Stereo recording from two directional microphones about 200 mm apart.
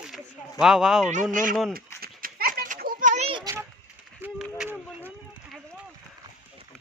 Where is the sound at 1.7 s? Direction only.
45° right (ahead or behind); by 3.5 s 25° right (ahead or behind).